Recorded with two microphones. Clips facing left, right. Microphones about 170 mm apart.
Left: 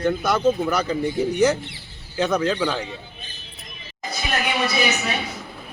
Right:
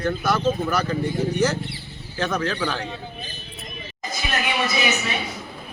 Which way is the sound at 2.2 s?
15° left (ahead or behind).